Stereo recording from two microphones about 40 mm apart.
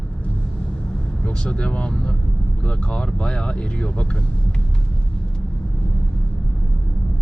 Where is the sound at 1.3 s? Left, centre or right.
Left.